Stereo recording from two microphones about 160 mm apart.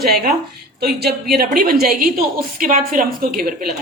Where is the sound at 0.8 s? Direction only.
75° right (ahead or behind); by 3.6 s 60° right (ahead or behind).